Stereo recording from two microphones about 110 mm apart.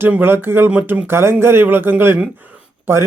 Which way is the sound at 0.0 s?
20° right (ahead or behind).